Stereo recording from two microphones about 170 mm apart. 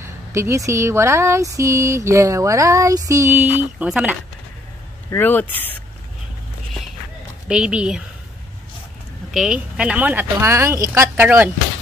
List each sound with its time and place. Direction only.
0.0 s speech: 15° right (ahead or behind)
5.1 s speech: 10° left (ahead or behind)
7.4 s a woman's voice: 5° right (ahead or behind)
9.3 s speech: 5° right (ahead or behind)